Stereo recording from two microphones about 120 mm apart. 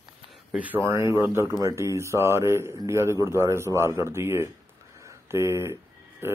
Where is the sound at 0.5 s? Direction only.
10° right (ahead or behind).